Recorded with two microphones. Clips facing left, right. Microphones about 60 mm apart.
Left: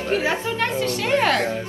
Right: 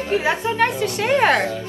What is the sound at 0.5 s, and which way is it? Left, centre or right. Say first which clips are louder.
Speech: right 3 dB; right.